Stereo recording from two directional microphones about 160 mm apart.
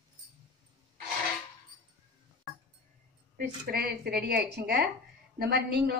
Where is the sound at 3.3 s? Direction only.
70° right (ahead or behind); by 5.9 s 85° right.